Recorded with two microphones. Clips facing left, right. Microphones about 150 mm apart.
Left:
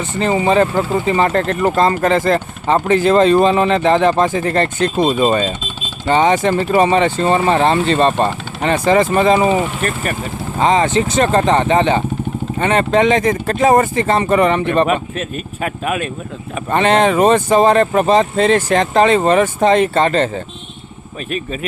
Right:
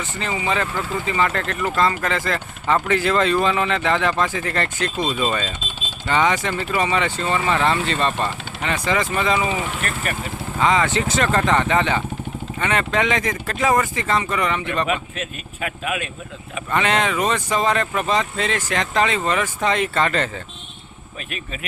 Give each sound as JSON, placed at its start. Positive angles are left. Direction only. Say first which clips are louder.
{"t": 0.0, "sound": "speech", "louder": "left 10 dB", "side_deg": 35}
{"t": 10.6, "sound": "speech", "louder": "left 5 dB", "side_deg": 25}
{"t": 14.1, "sound": "speech", "louder": "left 9 dB", "side_deg": 45}
{"t": 17.2, "sound": "speech", "louder": "left 10 dB", "side_deg": 45}
{"t": 17.5, "sound": "speech", "louder": "left 9 dB", "side_deg": 35}